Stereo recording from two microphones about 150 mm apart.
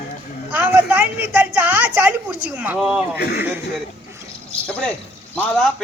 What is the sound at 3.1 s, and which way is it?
Speech, 90° left.